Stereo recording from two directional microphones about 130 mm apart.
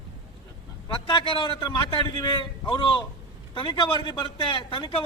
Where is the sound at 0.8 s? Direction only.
40° left (ahead or behind).